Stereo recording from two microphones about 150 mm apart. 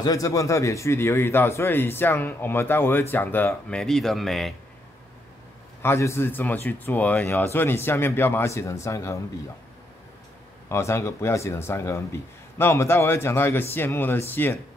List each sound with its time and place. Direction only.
0.0 s a man's voice: 25° left (ahead or behind); by 4.6 s centre (ahead or behind)
5.8 s a man's voice: 15° left (ahead or behind)
10.7 s a man's voice: 20° left (ahead or behind)